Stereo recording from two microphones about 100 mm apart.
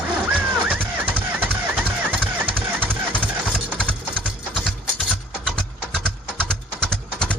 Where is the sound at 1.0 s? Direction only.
20° right (ahead or behind).